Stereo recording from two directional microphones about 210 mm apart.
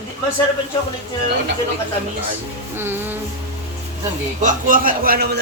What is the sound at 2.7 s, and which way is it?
Music, 10° right (ahead or behind).